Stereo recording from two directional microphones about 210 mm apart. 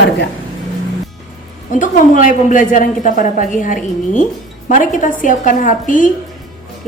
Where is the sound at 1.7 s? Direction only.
40° left (ahead or behind).